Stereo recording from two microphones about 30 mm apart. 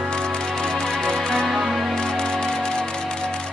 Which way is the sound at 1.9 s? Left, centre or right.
Left.